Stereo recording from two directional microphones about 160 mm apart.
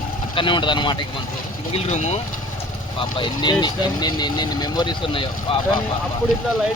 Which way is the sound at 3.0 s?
30° left (ahead or behind).